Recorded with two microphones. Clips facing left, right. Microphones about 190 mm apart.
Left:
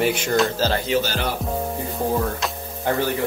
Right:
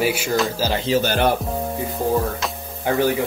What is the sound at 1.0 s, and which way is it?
Speech, 55° right (ahead or behind).